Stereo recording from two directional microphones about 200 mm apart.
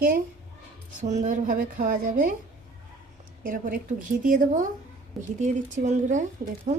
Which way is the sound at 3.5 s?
40° right (ahead or behind).